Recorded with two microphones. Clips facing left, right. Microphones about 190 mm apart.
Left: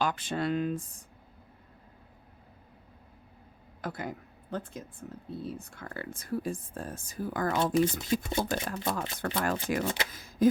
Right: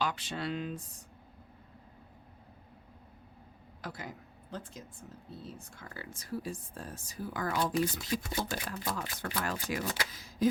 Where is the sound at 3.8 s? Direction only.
55° left (ahead or behind).